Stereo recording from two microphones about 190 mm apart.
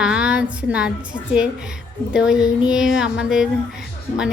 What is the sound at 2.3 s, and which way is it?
Speech, 20° left (ahead or behind).